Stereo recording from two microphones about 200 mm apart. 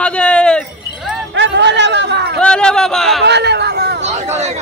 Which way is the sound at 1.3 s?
60° right (ahead or behind).